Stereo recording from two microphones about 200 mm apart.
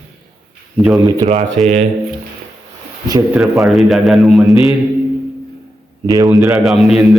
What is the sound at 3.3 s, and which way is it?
A man's voice, centre (ahead or behind).